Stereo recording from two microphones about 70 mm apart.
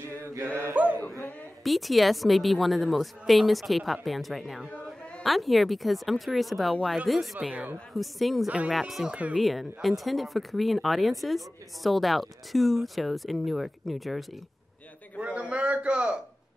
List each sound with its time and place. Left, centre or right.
0.1 s chant: right
0.8 s a man's voice: right
1.6 s speech: centre
8.5 s a man's voice: centre
8.7 s speech: centre
9.1 s a man's voice: centre
9.4 s speech: centre
15.1 s a man's voice: centre